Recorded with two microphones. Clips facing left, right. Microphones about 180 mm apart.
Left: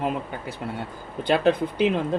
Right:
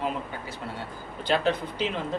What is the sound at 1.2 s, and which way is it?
Speech, 55° left (ahead or behind).